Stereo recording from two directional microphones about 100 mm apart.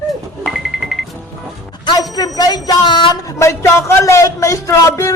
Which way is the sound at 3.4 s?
30° left (ahead or behind).